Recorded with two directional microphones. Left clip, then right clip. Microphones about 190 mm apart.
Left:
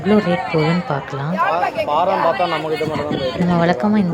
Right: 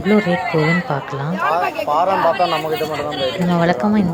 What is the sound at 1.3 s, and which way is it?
A man's voice, 30° left (ahead or behind).